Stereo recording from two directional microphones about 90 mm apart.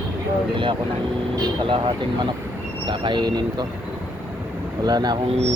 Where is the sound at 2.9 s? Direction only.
60° right (ahead or behind).